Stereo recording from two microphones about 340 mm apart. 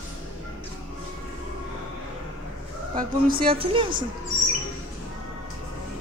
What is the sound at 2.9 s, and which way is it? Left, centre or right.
A woman's voice, right.